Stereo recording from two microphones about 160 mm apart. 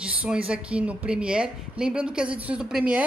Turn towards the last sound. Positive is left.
turn(degrees=-5)  # may be behind; listen again after turning